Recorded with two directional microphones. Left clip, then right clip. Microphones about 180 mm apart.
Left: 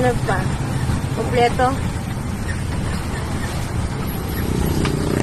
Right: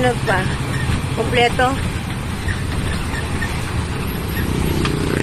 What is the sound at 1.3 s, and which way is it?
Speech, 10° right (ahead or behind).